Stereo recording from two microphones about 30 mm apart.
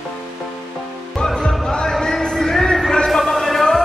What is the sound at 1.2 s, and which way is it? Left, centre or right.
Music, left.